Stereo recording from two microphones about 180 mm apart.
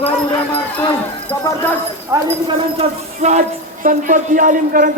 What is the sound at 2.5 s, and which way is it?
A woman's voice, 30° right (ahead or behind).